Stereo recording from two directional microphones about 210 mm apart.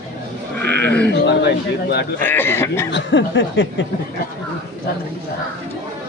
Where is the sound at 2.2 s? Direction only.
10° left (ahead or behind).